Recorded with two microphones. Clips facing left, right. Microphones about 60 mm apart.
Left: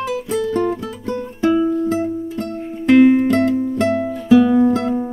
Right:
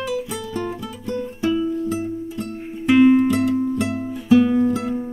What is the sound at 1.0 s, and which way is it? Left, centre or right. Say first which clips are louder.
Music: left 4 dB; left.